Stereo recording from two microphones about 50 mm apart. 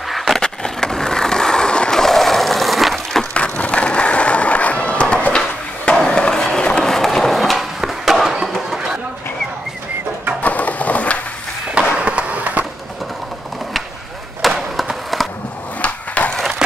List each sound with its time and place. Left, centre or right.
0.1 s skateboard: centre
0.4 s skateboard: centre
3.3 s skateboard: left; by 7.6 s centre
7.8 s a sound: centre
10.4 s crushing: left
11.7 s skateboard: right
14.4 s skateboard: centre
16.2 s a sound: left